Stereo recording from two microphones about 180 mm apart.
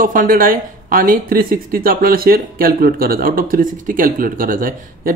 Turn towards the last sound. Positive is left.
turn(degrees=-50)  # may be behind; listen again after turning